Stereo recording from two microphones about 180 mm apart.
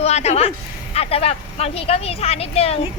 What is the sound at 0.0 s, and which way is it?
A woman's voice, 35° left (ahead or behind).